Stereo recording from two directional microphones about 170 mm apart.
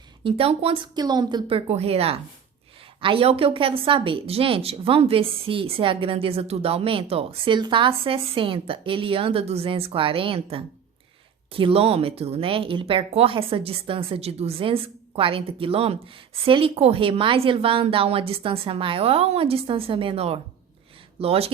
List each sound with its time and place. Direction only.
0.3 s a woman's voice: 35° right (ahead or behind)